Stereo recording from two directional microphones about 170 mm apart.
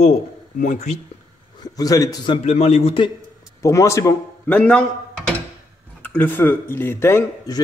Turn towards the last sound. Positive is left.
turn(degrees=20)  # may be behind; listen again after turning